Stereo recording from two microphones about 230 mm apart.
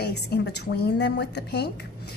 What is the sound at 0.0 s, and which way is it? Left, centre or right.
A woman's voice, left.